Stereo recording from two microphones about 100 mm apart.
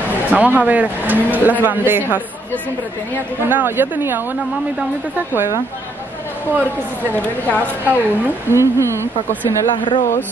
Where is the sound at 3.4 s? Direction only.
20° right (ahead or behind).